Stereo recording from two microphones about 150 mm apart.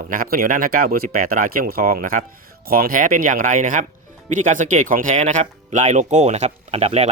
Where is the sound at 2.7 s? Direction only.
75° right (ahead or behind).